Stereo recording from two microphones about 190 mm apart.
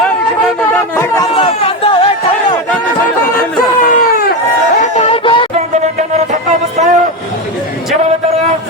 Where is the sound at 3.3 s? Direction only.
45° left (ahead or behind); by 5.5 s 25° left (ahead or behind).